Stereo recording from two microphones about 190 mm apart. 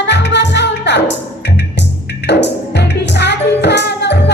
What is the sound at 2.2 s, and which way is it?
Music, 60° left (ahead or behind).